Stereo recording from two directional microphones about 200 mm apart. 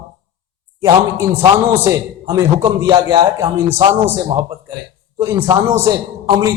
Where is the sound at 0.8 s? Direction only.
15° right (ahead or behind).